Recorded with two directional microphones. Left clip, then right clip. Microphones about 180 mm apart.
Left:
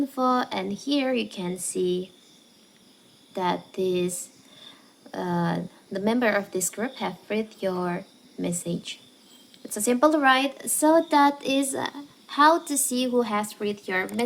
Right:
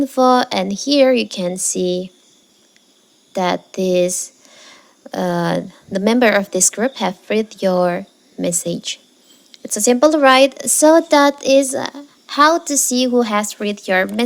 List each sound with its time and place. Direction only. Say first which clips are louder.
0.0 s speech: right 11 dB; 45° right (ahead or behind)
3.3 s speech: right 8 dB; 40° right (ahead or behind)